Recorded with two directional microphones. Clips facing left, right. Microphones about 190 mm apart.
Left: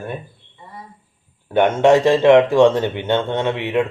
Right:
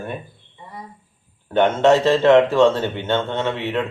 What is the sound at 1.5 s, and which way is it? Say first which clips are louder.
Speech: left 2 dB; 10° left (ahead or behind).